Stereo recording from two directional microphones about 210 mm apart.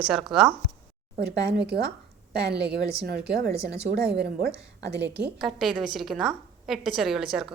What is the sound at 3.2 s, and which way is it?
Speech, 50° right (ahead or behind).